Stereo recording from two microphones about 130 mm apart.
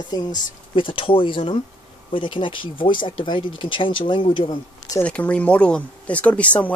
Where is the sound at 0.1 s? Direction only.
35° left (ahead or behind).